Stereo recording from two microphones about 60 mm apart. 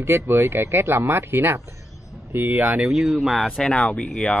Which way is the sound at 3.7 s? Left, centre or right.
Centre.